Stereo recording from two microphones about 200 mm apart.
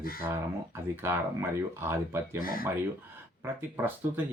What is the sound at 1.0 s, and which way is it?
Speech, 10° right (ahead or behind).